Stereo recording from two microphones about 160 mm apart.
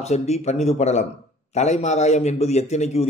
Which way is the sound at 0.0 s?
40° left (ahead or behind).